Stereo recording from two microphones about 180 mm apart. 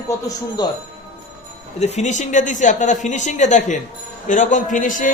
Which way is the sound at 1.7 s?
40° left (ahead or behind).